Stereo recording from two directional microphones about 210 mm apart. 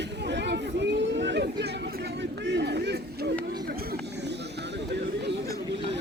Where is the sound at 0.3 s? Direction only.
55° right (ahead or behind).